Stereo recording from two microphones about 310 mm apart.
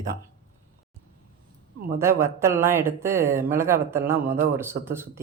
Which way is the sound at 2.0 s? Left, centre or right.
Centre.